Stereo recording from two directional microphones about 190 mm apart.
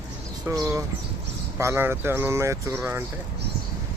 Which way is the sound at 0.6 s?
15° right (ahead or behind).